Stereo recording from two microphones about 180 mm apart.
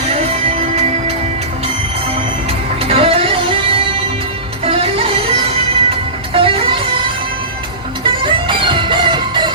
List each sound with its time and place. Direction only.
2.8 s music: 30° right (ahead or behind)
8.0 s music: 30° right (ahead or behind)